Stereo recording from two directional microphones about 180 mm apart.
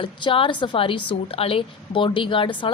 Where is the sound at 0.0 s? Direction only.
30° left (ahead or behind).